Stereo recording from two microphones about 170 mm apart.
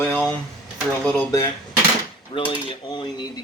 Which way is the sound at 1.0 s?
20° left (ahead or behind).